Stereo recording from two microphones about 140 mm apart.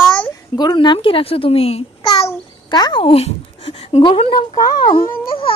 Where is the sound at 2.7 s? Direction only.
30° left (ahead or behind).